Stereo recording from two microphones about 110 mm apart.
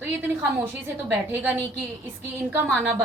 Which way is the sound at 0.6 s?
20° right (ahead or behind).